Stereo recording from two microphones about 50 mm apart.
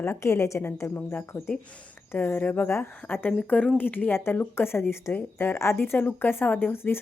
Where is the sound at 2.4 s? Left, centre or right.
Left.